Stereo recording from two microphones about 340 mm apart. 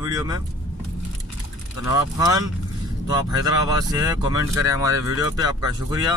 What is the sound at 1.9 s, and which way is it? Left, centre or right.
Speech, centre.